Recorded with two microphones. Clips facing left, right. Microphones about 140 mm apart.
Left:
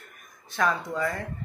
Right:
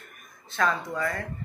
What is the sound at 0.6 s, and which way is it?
Speech, 15° left (ahead or behind).